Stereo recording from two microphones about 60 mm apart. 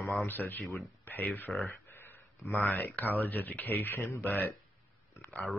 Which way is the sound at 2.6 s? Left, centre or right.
Left.